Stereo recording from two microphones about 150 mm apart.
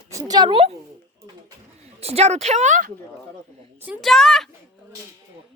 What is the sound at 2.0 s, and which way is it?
Speech, 45° right (ahead or behind).